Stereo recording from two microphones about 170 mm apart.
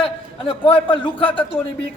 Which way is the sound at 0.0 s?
30° left (ahead or behind).